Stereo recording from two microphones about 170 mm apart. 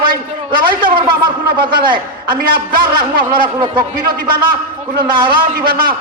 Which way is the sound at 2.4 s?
60° right (ahead or behind).